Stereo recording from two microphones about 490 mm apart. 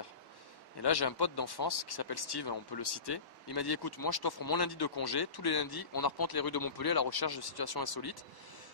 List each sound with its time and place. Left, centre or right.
0.8 s speech: left